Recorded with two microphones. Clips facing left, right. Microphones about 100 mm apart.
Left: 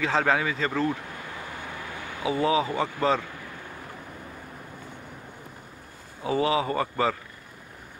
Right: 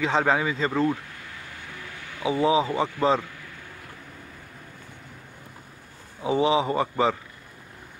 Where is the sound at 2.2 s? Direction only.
25° right (ahead or behind).